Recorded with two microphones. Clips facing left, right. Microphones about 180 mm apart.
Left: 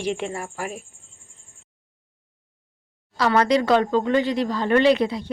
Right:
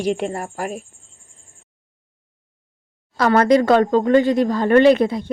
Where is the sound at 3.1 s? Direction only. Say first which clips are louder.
Right 5 dB; 50° right (ahead or behind).